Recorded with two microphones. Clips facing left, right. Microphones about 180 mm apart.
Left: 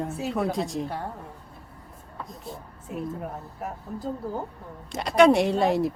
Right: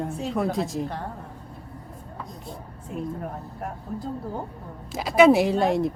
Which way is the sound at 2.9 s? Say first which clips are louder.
Right 1 dB; 5° left (ahead or behind).